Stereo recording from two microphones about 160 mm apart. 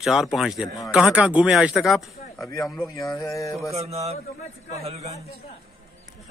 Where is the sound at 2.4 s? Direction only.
20° left (ahead or behind).